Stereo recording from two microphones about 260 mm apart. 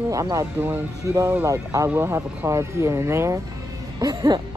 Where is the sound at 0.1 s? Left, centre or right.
Centre.